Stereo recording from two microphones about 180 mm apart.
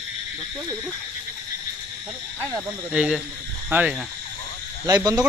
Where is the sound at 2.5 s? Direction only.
5° right (ahead or behind).